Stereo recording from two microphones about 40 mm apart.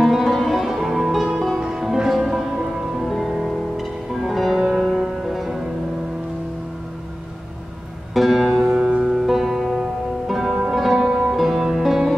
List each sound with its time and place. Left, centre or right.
0.0 s music: centre
1.6 s music: right
1.9 s music: centre
8.1 s music: centre
8.6 s music: right; by 12.1 s centre